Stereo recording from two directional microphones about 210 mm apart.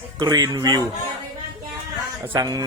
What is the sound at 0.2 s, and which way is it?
Speech, 20° right (ahead or behind).